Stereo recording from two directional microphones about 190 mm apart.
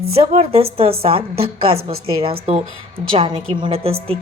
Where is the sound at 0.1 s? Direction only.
35° right (ahead or behind).